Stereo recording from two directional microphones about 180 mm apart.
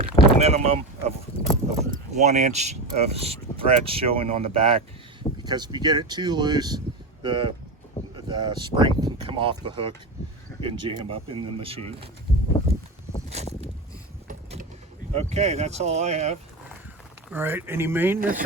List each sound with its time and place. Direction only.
0.0 s speech: 35° right (ahead or behind)
13.3 s boat: 40° right (ahead or behind)
15.1 s speech: 35° right (ahead or behind)
17.3 s speech: 10° right (ahead or behind)
18.2 s speech: 50° right (ahead or behind)